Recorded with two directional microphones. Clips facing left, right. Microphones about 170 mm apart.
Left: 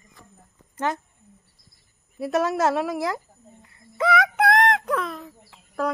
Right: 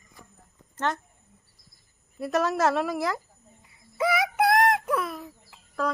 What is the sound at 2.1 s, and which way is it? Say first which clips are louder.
Speech: left 2 dB; centre (ahead or behind).